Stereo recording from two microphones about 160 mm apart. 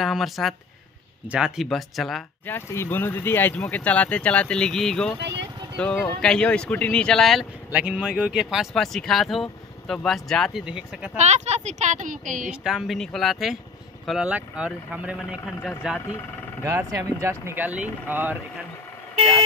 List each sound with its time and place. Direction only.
0.0 s speech: centre (ahead or behind)
2.4 s speech: 15° left (ahead or behind)
5.2 s vehicle: 90° right
5.8 s speech: 5° left (ahead or behind)
11.1 s speech: 45° right (ahead or behind)
12.4 s speech: 5° right (ahead or behind)
16.6 s speech: 20° right (ahead or behind)